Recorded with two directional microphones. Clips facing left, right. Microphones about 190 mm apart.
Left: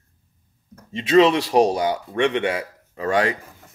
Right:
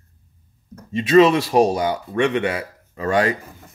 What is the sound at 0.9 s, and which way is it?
A man's voice, 20° left (ahead or behind).